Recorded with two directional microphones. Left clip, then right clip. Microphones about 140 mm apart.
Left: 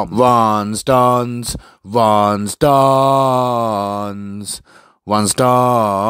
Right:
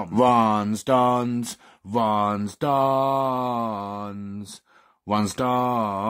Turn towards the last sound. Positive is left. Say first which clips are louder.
# left 10 dB
turn(degrees=50)  # may be behind; listen again after turning